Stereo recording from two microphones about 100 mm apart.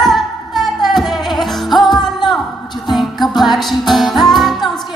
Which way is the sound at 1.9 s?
45° left (ahead or behind).